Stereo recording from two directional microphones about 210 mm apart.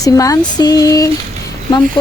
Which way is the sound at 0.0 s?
15° left (ahead or behind).